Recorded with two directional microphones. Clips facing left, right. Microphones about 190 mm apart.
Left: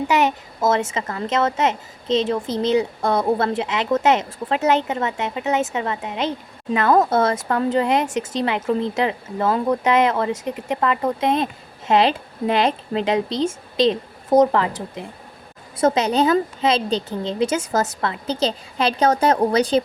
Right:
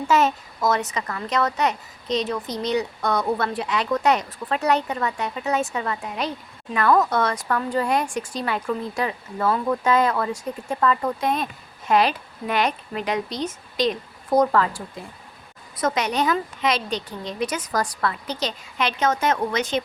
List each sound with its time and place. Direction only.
0.1 s a child's voice: 20° left (ahead or behind); by 19.8 s 35° left (ahead or behind)